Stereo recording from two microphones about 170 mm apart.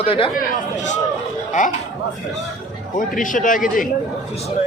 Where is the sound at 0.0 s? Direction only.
30° left (ahead or behind).